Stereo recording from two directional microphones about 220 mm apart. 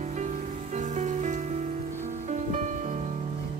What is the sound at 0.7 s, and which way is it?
Music, 35° right (ahead or behind).